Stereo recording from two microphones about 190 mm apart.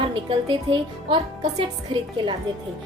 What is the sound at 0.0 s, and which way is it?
Speech, 25° right (ahead or behind).